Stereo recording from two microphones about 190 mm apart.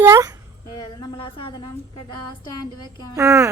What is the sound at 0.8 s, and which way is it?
A woman's voice, 20° left (ahead or behind).